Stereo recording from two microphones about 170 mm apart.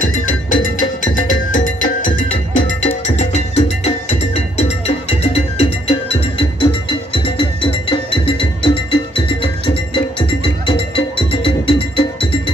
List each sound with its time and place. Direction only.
0.0 s music: 50° left (ahead or behind); by 12.4 s 30° left (ahead or behind)